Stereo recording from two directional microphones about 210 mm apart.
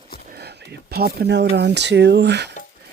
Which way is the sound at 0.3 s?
50° right (ahead or behind).